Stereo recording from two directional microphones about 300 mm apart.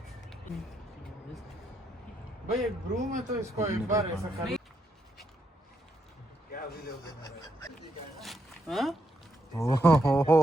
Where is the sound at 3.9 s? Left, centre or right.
Centre.